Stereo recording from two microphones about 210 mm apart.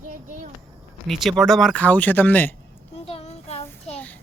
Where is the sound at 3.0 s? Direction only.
30° left (ahead or behind).